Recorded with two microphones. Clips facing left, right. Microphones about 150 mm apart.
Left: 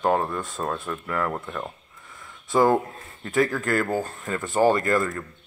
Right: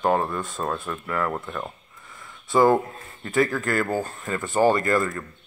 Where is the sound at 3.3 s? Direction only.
40° left (ahead or behind).